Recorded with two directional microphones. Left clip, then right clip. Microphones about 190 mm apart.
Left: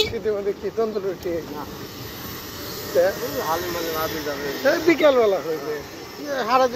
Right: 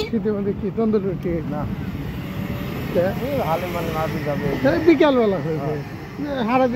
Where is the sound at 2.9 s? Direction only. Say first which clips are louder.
Left 1 dB; 5° left (ahead or behind).